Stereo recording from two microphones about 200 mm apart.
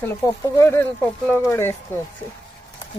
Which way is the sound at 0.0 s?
10° left (ahead or behind).